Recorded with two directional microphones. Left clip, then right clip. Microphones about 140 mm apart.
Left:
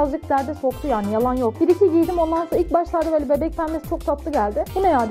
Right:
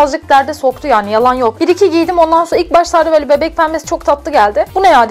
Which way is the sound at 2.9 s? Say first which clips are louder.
Right 11 dB; 30° right (ahead or behind).